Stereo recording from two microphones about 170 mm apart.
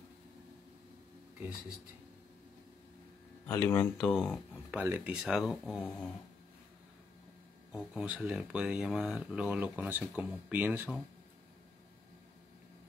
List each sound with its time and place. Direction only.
3.4 s speech: 15° left (ahead or behind)
7.7 s speech: 5° right (ahead or behind)